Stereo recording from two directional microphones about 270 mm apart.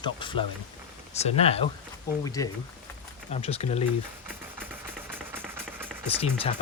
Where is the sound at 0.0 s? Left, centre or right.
Centre.